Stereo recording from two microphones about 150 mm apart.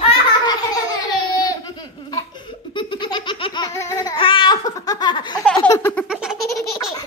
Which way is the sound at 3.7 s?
20° left (ahead or behind).